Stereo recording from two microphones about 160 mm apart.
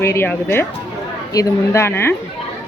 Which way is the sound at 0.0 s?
15° left (ahead or behind).